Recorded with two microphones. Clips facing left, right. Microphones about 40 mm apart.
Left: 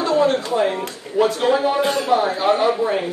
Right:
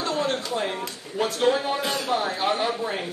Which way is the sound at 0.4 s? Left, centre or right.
Left.